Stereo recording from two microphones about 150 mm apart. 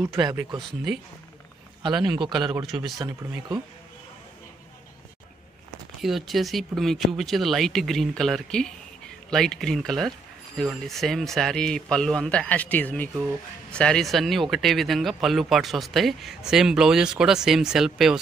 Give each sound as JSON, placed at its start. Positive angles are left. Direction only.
{"t": 0.0, "sound": "speech", "side_deg": -20}
{"t": 0.6, "sound": "speech", "side_deg": 0}
{"t": 1.8, "sound": "a man's voice", "side_deg": -30}
{"t": 2.6, "sound": "speech", "side_deg": 0}
{"t": 3.0, "sound": "speech", "side_deg": -25}
{"t": 5.9, "sound": "speech", "side_deg": 0}